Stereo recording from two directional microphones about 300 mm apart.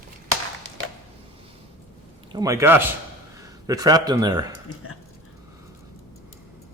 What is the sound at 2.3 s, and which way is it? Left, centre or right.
Speech, centre.